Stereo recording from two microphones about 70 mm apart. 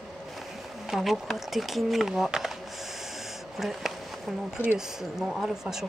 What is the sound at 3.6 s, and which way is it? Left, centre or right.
A woman's voice, centre.